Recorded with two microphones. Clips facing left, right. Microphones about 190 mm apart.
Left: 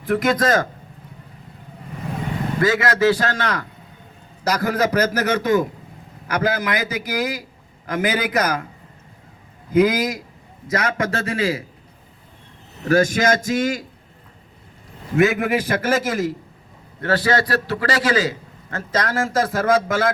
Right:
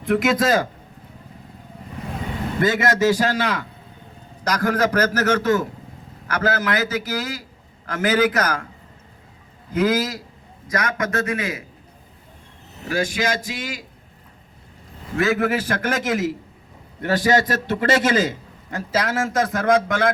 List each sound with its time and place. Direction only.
0.0 s a man's voice: centre (ahead or behind)
2.6 s a man's voice: 20° right (ahead or behind); by 3.7 s 5° right (ahead or behind)
4.4 s a man's voice: 10° left (ahead or behind)
9.7 s a man's voice: 15° left (ahead or behind)
10.7 s a man's voice: 25° left (ahead or behind)
12.9 s speech: 45° left (ahead or behind)
15.1 s a man's voice: 15° left (ahead or behind); by 16.3 s centre (ahead or behind)
17.0 s a man's voice: 15° right (ahead or behind); by 20.1 s 5° left (ahead or behind)